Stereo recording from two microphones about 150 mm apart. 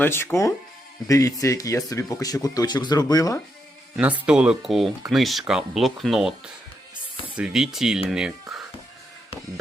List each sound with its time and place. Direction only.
0.0 s speech: 15° left (ahead or behind)
4.3 s speech: 5° right (ahead or behind)
8.1 s a sound: 5° right (ahead or behind)